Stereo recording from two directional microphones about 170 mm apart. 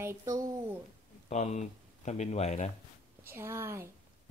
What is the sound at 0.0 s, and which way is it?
Speech, 15° right (ahead or behind).